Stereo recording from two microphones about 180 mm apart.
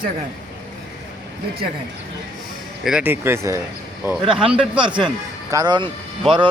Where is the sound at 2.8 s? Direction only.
10° right (ahead or behind).